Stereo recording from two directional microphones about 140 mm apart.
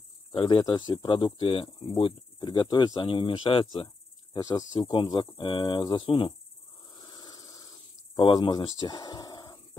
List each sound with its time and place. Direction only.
0.3 s speech: 35° left (ahead or behind)
7.0 s insect: 30° left (ahead or behind)